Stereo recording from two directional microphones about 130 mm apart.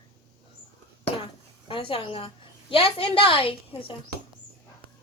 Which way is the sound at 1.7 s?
40° left (ahead or behind).